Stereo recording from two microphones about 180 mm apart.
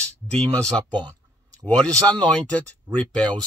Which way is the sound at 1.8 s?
5° left (ahead or behind).